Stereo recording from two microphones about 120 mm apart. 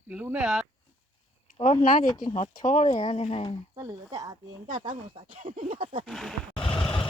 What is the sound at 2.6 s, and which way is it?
Speech, 85° left.